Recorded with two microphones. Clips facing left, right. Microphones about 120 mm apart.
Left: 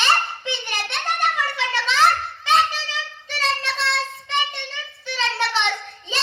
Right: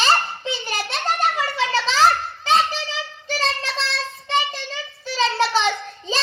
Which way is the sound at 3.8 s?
65° left (ahead or behind).